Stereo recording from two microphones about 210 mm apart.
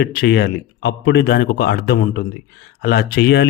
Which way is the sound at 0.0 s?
50° left (ahead or behind).